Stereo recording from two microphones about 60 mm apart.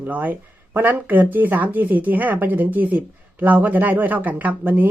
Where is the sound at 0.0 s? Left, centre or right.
Right.